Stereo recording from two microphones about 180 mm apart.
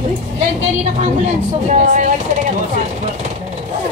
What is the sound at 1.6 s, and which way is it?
Speech, 40° right (ahead or behind).